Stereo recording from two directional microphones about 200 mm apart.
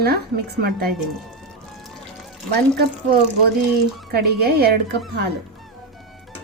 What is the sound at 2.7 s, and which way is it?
A woman's voice, 50° right (ahead or behind).